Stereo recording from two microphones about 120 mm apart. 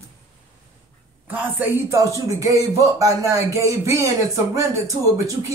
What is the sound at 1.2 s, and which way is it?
Speech, 15° right (ahead or behind).